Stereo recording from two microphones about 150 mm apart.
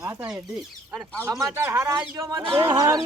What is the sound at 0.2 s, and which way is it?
Speech, 25° right (ahead or behind).